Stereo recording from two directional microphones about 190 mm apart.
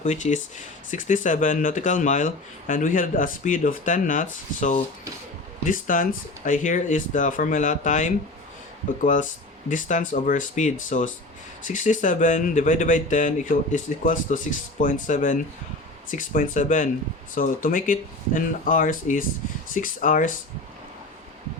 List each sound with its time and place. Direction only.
0.0 s speech: 40° left (ahead or behind)